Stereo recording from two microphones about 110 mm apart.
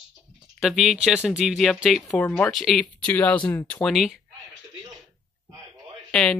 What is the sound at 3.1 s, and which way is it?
Speech, 10° left (ahead or behind).